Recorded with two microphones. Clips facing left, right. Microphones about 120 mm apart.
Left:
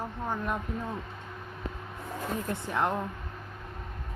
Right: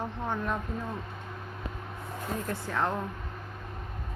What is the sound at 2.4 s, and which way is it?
Speech, 20° left (ahead or behind).